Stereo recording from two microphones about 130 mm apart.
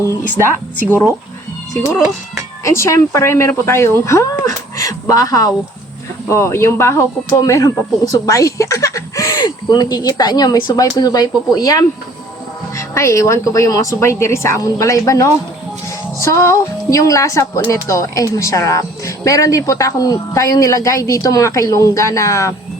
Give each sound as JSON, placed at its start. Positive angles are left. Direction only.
{"t": 2.6, "sound": "speech", "side_deg": 25}
{"t": 8.1, "sound": "a sound", "side_deg": 25}
{"t": 9.4, "sound": "speech", "side_deg": 35}